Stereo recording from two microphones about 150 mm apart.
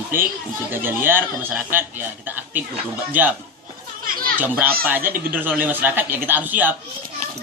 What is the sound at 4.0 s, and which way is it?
Children playing, 75° right (ahead or behind).